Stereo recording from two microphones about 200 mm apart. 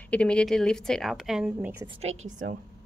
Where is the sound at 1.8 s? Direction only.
30° right (ahead or behind).